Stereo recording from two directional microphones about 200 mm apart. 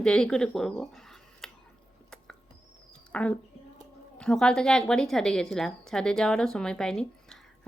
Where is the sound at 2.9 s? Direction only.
5° left (ahead or behind).